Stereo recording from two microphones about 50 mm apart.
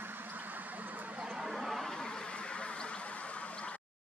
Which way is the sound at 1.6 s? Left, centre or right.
Centre.